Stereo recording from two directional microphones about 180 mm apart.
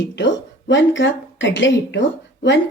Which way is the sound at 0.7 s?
90° left.